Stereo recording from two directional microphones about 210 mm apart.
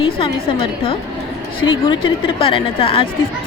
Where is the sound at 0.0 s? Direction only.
25° left (ahead or behind).